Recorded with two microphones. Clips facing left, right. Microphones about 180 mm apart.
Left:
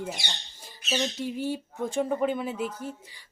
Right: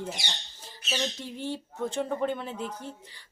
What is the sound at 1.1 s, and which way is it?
A woman's voice, 10° left (ahead or behind).